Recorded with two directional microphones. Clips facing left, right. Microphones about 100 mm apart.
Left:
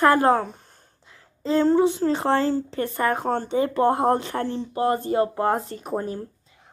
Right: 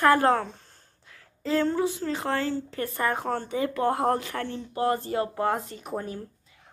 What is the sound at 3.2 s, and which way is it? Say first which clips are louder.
A woman's voice: left 5 dB; 30° left (ahead or behind).